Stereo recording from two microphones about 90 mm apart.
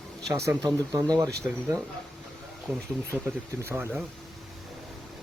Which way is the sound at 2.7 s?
25° right (ahead or behind).